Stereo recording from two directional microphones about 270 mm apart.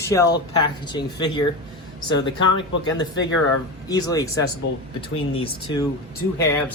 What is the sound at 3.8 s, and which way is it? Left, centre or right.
Speech, centre.